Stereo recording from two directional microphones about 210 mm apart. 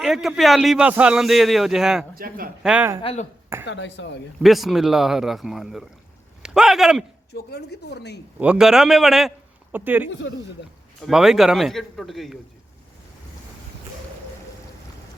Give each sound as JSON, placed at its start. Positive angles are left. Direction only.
{"t": 0.0, "sound": "a man's voice", "side_deg": 0}
{"t": 2.1, "sound": "a man's voice", "side_deg": -45}
{"t": 2.6, "sound": "speech", "side_deg": -10}
{"t": 3.0, "sound": "speech", "side_deg": 30}
{"t": 3.7, "sound": "speech", "side_deg": 60}
{"t": 4.4, "sound": "a man's voice", "side_deg": 0}
{"t": 6.4, "sound": "a sound", "side_deg": 0}
{"t": 7.3, "sound": "speech", "side_deg": 50}
{"t": 8.4, "sound": "a man's voice", "side_deg": -5}
{"t": 10.1, "sound": "speech", "side_deg": 60}
{"t": 11.0, "sound": "a man's voice", "side_deg": 0}